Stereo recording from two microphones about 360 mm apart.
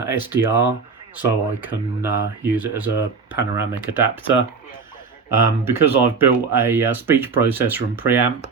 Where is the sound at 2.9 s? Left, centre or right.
Left.